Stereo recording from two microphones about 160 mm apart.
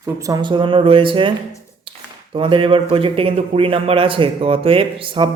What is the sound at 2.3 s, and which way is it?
Speech, 35° right (ahead or behind).